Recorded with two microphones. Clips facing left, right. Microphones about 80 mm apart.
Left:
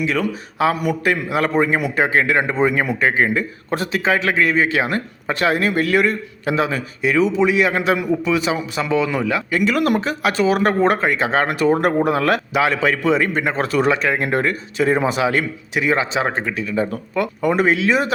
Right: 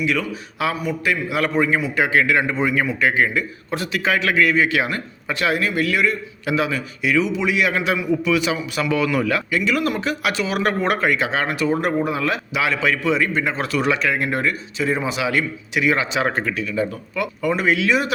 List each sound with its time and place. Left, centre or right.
0.0 s speech: left
0.7 s a man's voice: left
1.0 s speech: left
9.5 s speech: left
10.0 s speech: left
16.6 s speech: left